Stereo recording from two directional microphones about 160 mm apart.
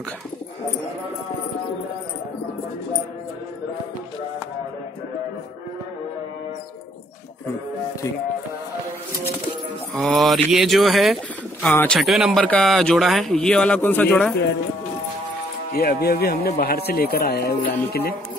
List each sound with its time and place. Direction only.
9.9 s speech: centre (ahead or behind)
12.0 s speech: centre (ahead or behind)
15.7 s speech: 75° left (ahead or behind)